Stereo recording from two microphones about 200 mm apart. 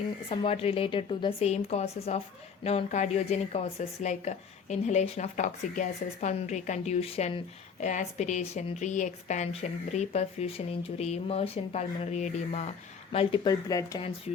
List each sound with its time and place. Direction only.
0.3 s a woman's voice: 30° left (ahead or behind)
13.1 s speech: 25° left (ahead or behind)